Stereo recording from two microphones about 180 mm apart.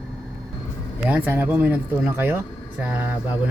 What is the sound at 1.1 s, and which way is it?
Speech, 10° right (ahead or behind).